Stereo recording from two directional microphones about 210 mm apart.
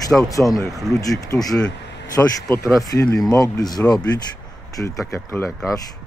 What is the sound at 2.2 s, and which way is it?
Speech, 10° left (ahead or behind).